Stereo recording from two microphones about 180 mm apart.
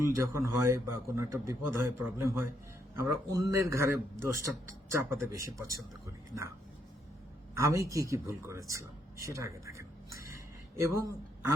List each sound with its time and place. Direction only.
0.0 s a man's voice: 15° right (ahead or behind)
7.5 s a man's voice: 15° right (ahead or behind)